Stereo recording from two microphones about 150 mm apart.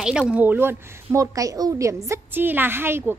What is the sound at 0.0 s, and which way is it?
A woman's voice, 5° right (ahead or behind).